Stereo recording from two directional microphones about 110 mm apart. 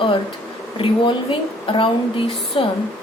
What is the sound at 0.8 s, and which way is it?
A woman's voice, 50° left (ahead or behind).